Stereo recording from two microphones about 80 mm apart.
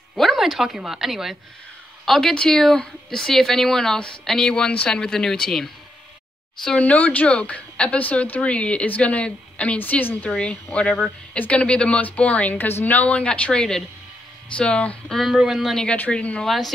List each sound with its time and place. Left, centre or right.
0.1 s a woman's voice: centre
6.8 s a woman's voice: centre
15.3 s a woman's voice: centre
16.4 s speech: centre